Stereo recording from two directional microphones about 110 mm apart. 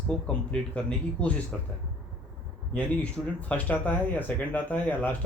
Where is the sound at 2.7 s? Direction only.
15° left (ahead or behind).